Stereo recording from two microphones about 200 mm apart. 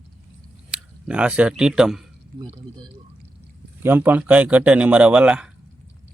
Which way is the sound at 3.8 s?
10° right (ahead or behind).